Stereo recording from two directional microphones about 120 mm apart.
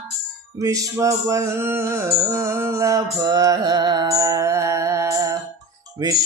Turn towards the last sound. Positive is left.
turn(degrees=-25)  # may be behind; listen again after turning